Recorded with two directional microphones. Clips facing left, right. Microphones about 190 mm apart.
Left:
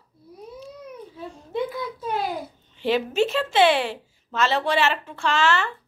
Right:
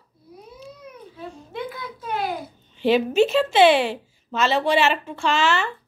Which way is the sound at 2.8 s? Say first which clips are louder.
Right 4 dB; 20° right (ahead or behind).